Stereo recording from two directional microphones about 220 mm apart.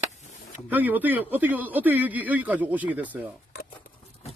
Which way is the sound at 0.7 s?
10° right (ahead or behind).